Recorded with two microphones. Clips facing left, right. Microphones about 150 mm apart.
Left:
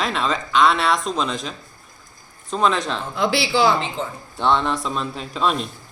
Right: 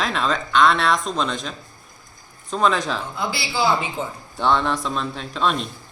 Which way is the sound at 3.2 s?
90° left.